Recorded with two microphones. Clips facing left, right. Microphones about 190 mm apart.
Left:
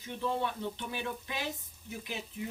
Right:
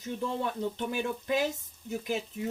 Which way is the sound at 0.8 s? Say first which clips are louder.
Right 6 dB; 45° right (ahead or behind).